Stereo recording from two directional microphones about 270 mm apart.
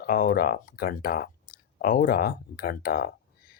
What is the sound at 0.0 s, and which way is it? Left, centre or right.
Speech, left.